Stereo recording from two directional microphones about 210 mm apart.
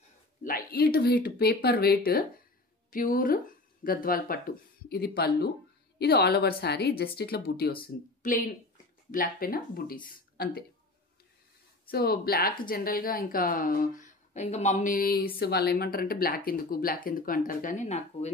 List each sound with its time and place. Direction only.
0.4 s speech: 45° left (ahead or behind)
11.9 s speech: 45° left (ahead or behind)